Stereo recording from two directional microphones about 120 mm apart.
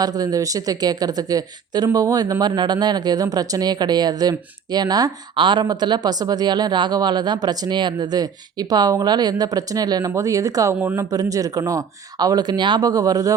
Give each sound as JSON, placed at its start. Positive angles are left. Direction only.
{"t": 0.0, "sound": "a woman's voice", "side_deg": -30}
{"t": 10.8, "sound": "speech", "side_deg": -15}
{"t": 11.1, "sound": "a woman's voice", "side_deg": -30}